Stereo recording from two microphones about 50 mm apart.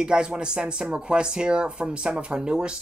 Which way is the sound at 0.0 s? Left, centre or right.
Centre.